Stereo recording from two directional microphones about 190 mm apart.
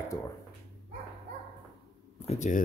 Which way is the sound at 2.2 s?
40° left (ahead or behind).